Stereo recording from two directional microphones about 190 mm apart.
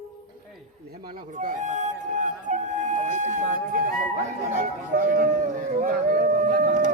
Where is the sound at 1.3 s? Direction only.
40° right (ahead or behind).